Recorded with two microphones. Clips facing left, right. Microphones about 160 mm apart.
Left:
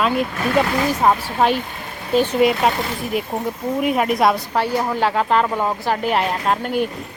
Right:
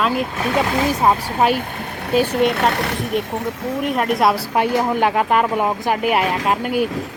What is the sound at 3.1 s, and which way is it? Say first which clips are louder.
Speech: left 1 dB; 5° left (ahead or behind).